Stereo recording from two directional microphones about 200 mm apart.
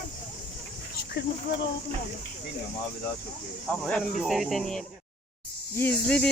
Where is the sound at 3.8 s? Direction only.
Centre (ahead or behind).